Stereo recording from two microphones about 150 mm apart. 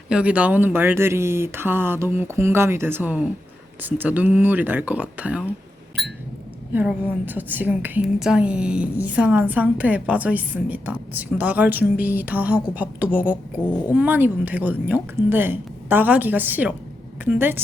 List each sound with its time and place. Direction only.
0.1 s a woman's voice: 10° right (ahead or behind)
6.0 s a sound: centre (ahead or behind)
6.7 s a woman's voice: 10° right (ahead or behind)